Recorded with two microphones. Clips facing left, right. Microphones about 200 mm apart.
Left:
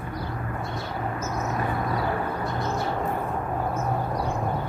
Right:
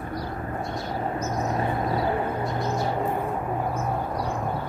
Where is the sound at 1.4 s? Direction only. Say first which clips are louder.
Right 1 dB; 30° right (ahead or behind).